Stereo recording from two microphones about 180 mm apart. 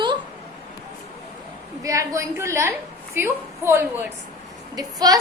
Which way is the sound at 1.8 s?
15° right (ahead or behind).